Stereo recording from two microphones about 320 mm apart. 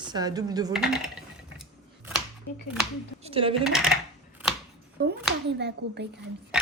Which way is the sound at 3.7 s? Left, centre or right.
Centre.